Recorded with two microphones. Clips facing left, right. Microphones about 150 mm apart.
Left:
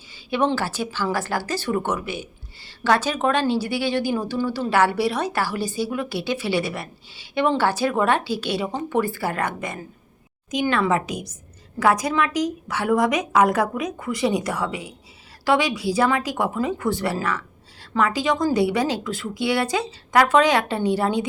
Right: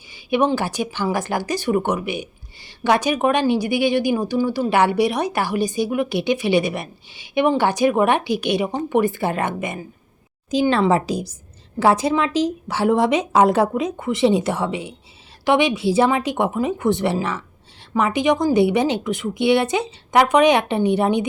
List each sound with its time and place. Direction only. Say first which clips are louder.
0.1 s a woman's voice: right 3 dB; 15° right (ahead or behind)
10.5 s a woman's voice: right 4 dB; 30° right (ahead or behind)